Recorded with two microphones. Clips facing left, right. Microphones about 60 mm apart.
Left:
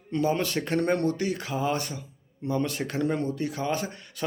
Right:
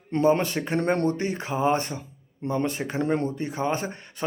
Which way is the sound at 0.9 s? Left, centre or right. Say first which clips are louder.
Right 1 dB; right.